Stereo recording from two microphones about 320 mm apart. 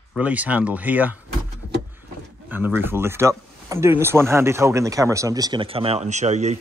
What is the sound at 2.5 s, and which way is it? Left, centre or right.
Speech, centre.